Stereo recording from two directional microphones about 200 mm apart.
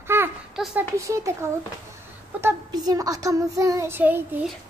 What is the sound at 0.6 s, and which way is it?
A child's voice, 10° right (ahead or behind).